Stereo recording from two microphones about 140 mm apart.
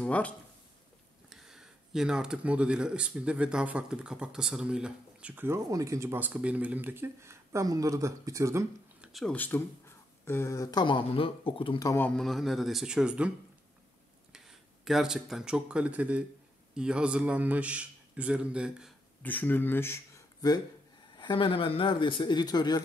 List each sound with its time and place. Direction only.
0.0 s speech: 10° left (ahead or behind)
1.3 s speech: 5° right (ahead or behind); by 8.6 s 20° right (ahead or behind)
9.0 s a sound: centre (ahead or behind)
9.3 s speech: 15° left (ahead or behind); by 11.8 s 40° left (ahead or behind)
11.8 s speech: 20° left (ahead or behind)
12.1 s speech: centre (ahead or behind)
14.3 s speech: 5° right (ahead or behind)
19.2 s speech: 15° left (ahead or behind); by 22.8 s 30° left (ahead or behind)